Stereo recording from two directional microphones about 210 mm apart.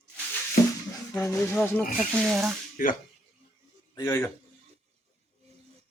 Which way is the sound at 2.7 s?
40° left (ahead or behind).